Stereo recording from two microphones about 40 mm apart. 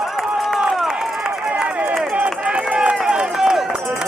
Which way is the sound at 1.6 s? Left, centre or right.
Right.